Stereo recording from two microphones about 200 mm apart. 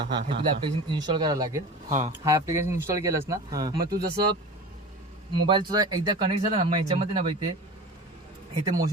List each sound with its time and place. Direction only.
0.0 s speech: 25° right (ahead or behind)
1.9 s speech: 35° right (ahead or behind)
2.1 s speech: 15° right (ahead or behind)
3.8 s speech: 50° right (ahead or behind)
5.5 s speech: 20° right (ahead or behind)